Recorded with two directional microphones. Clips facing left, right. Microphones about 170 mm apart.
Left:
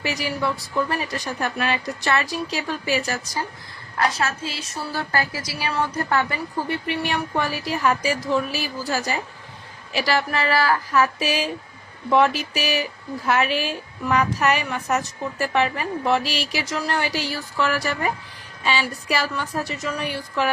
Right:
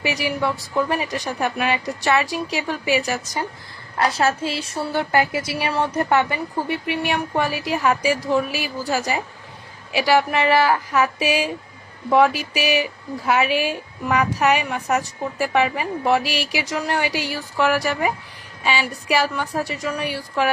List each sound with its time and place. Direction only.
0.0 s speech: 15° right (ahead or behind)
3.9 s a woman's voice: 30° right (ahead or behind); by 20.5 s 10° right (ahead or behind)